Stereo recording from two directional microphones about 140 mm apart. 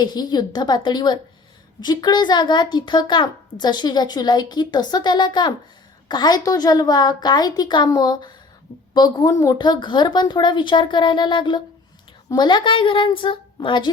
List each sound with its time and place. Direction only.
0.0 s a child's voice: 30° left (ahead or behind)